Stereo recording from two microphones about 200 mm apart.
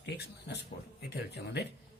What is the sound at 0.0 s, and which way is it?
Speech, 55° left (ahead or behind).